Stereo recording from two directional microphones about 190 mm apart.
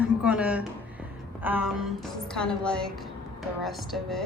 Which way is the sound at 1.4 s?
10° right (ahead or behind).